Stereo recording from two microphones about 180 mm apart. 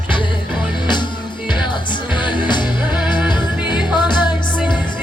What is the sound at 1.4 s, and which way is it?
Music, 25° left (ahead or behind).